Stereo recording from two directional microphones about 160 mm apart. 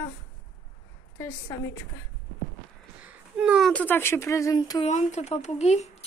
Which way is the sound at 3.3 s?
5° right (ahead or behind).